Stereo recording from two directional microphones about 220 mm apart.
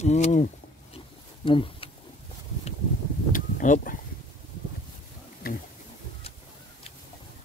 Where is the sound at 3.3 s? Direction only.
35° left (ahead or behind).